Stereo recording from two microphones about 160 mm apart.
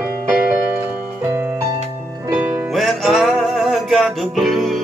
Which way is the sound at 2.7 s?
Centre (ahead or behind).